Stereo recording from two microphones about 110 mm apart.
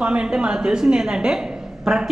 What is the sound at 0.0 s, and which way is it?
A woman's voice, 10° right (ahead or behind).